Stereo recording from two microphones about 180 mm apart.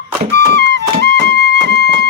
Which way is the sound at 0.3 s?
65° right (ahead or behind).